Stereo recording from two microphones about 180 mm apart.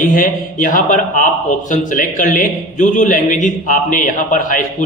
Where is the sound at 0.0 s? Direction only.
50° left (ahead or behind).